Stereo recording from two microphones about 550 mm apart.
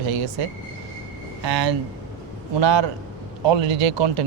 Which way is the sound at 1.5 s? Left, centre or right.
Right.